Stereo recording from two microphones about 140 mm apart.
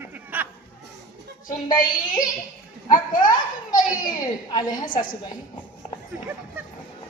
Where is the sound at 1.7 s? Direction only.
75° left (ahead or behind).